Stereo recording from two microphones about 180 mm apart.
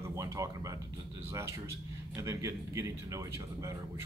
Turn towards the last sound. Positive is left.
turn(degrees=-15)  # may be behind; listen again after turning